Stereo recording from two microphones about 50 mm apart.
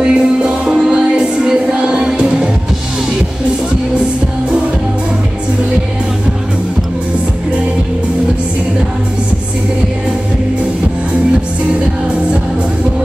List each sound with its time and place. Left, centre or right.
0.0 s music: right